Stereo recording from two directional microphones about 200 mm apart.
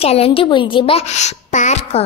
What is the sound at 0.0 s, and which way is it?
A woman's voice, 30° left (ahead or behind).